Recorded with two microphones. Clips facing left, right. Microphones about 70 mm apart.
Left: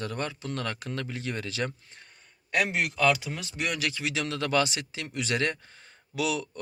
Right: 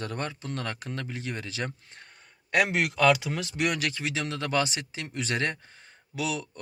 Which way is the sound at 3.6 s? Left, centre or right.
Right.